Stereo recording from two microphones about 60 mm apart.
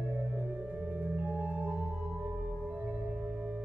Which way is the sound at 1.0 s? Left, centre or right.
Right.